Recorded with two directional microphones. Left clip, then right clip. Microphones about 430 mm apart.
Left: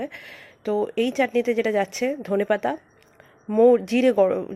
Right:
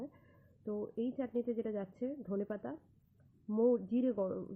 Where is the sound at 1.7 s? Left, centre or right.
Centre.